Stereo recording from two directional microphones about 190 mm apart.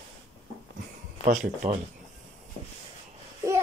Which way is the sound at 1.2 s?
40° right (ahead or behind).